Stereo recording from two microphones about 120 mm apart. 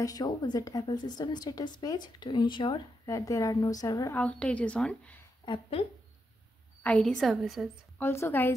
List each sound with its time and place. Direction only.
0.0 s a woman's voice: 30° left (ahead or behind)
3.1 s a woman's voice: 30° left (ahead or behind)
4.1 s a woman's voice: 10° left (ahead or behind)
5.4 s a woman's voice: 45° left (ahead or behind)
6.8 s a woman's voice: 10° left (ahead or behind)
8.0 s a woman's voice: 20° left (ahead or behind)